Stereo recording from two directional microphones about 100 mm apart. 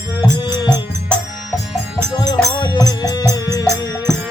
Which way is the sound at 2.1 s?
45° left (ahead or behind).